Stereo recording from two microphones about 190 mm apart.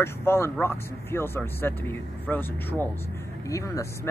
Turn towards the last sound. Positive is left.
turn(degrees=15)  # may be behind; listen again after turning